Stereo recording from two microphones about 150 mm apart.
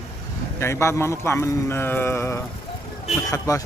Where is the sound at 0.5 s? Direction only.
20° left (ahead or behind).